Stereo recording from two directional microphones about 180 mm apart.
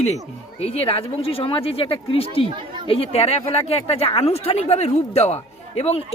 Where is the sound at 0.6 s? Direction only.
35° left (ahead or behind).